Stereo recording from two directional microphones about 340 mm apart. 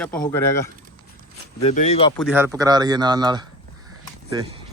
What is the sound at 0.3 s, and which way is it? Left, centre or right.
Speech, centre.